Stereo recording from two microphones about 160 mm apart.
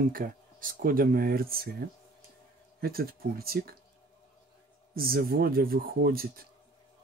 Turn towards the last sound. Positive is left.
turn(degrees=-70)  # may be behind; listen again after turning